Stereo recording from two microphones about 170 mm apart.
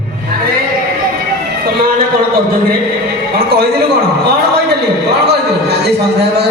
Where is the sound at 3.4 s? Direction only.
65° right (ahead or behind).